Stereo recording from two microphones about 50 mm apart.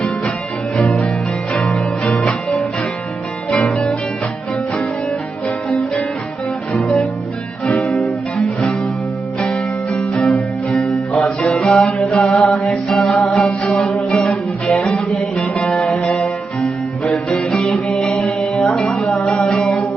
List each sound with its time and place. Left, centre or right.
1.5 s music: left
5.7 s music: left
9.4 s music: left
12.1 s mantra: left
12.5 s music: centre; by 19.6 s left